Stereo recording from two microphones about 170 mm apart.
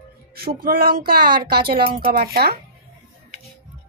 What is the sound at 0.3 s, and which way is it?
Speech, 65° right (ahead or behind).